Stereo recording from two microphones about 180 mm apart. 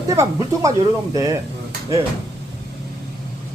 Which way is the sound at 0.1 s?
20° right (ahead or behind).